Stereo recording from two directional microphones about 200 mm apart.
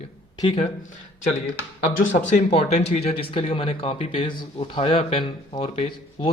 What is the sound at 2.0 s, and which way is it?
Speech, 40° left (ahead or behind).